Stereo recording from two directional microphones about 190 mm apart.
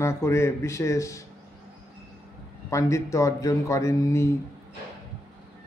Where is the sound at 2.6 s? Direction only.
15° left (ahead or behind).